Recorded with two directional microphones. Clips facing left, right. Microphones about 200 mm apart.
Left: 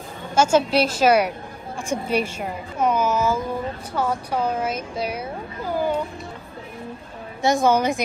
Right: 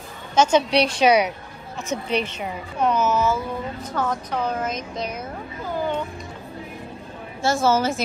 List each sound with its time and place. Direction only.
0.3 s a woman's voice: 10° left (ahead or behind)
7.4 s speech: 15° left (ahead or behind)